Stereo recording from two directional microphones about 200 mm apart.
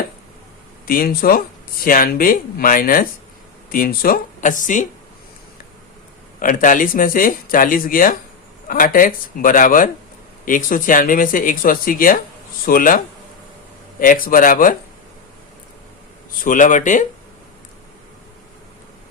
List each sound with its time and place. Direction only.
0.9 s speech: 45° left (ahead or behind)
6.4 s speech: 40° left (ahead or behind)
14.0 s speech: 45° left (ahead or behind)
16.4 s speech: 40° left (ahead or behind)